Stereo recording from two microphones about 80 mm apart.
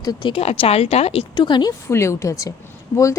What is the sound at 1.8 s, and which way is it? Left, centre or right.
Speech, left.